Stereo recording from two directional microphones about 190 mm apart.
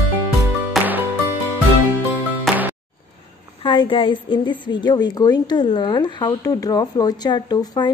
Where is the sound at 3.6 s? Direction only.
25° left (ahead or behind).